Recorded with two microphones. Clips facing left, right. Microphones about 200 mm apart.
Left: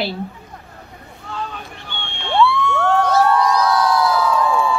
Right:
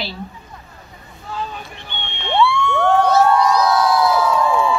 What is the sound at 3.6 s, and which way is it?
Crowd, 10° right (ahead or behind).